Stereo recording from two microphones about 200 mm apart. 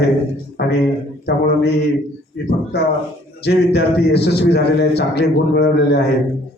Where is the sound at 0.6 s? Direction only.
55° left (ahead or behind).